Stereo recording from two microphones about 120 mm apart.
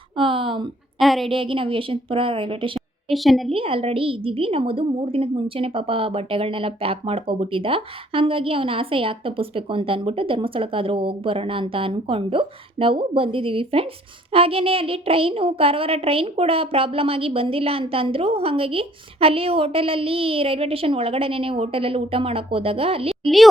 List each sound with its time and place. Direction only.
0.2 s a sound: 45° right (ahead or behind)
0.9 s a sound: centre (ahead or behind)
1.3 s a woman's voice: 45° right (ahead or behind)
3.1 s a woman's voice: centre (ahead or behind)
3.5 s a woman's voice: 50° right (ahead or behind)
23.2 s a woman's voice: centre (ahead or behind)